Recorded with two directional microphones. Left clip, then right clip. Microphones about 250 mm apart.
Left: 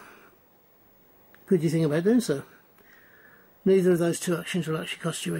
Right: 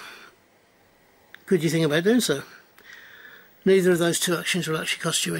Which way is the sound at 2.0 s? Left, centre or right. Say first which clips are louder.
Right 3 dB; centre.